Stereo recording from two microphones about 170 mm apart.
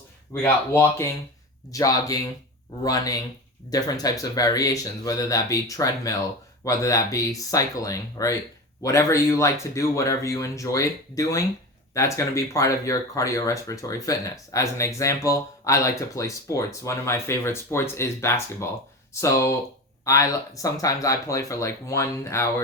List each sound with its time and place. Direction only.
0.3 s speech: 15° left (ahead or behind)